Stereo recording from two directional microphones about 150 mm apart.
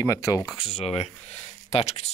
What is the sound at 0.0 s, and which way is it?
Speech, 20° left (ahead or behind).